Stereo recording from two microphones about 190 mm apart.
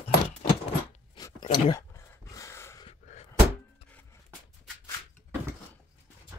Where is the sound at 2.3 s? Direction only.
15° left (ahead or behind).